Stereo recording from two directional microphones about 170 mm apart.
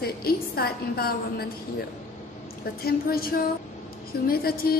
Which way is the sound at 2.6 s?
65° left (ahead or behind).